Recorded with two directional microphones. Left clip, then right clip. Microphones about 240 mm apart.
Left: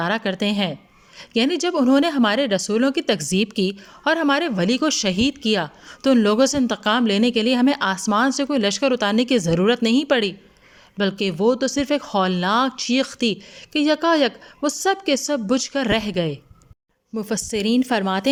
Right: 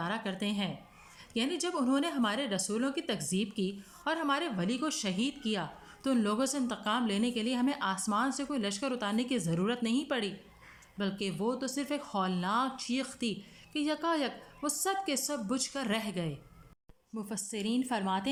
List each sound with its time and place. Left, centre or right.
0.0 s speech: left